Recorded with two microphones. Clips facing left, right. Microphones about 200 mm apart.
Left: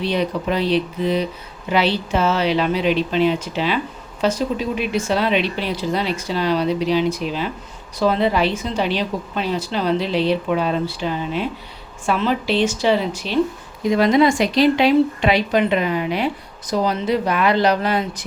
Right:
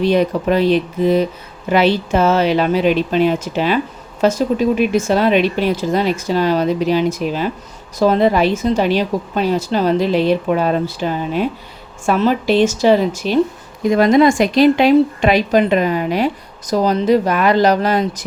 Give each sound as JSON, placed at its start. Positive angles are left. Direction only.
{"t": 0.0, "sound": "speech", "side_deg": -50}